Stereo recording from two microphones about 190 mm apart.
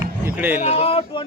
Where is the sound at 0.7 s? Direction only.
30° left (ahead or behind).